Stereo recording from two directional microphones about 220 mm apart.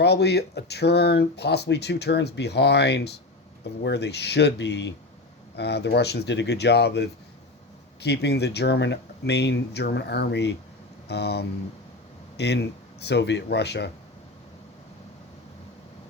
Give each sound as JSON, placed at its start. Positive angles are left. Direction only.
{"t": 0.0, "sound": "speech", "side_deg": 50}